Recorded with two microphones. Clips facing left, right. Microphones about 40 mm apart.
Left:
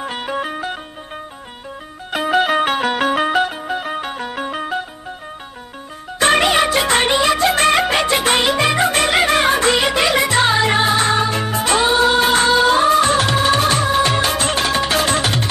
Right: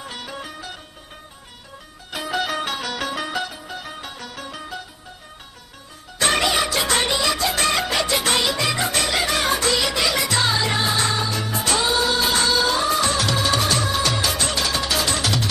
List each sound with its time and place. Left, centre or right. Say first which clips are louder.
0.0 s music: left 10 dB; left
2.0 s music: left 9 dB; left
6.1 s music: left 6 dB; left